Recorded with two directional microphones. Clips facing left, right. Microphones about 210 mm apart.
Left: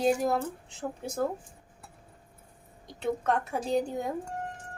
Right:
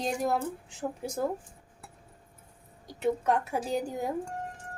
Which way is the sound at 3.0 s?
10° right (ahead or behind).